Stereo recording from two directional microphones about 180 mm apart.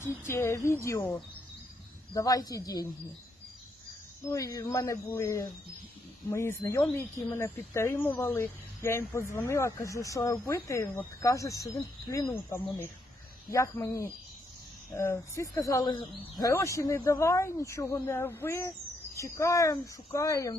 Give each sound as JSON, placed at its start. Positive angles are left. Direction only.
{"t": 0.0, "sound": "speech", "side_deg": 15}
{"t": 4.3, "sound": "speech", "side_deg": 20}